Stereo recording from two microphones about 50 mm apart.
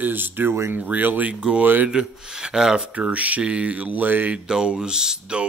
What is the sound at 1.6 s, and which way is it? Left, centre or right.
Speech, right.